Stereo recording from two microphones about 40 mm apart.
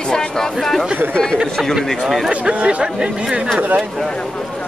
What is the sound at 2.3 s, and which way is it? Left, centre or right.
Speech, right.